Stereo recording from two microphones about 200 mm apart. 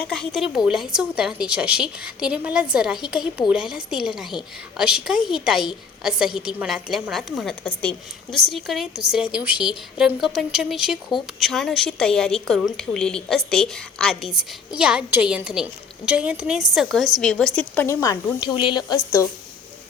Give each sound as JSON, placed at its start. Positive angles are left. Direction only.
{"t": 0.1, "sound": "a woman's voice", "side_deg": 0}